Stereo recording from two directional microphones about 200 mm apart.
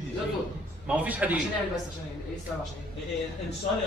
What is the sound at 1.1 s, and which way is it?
Speech, 10° right (ahead or behind).